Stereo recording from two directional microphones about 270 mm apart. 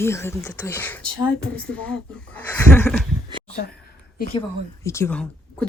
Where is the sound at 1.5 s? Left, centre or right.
Right.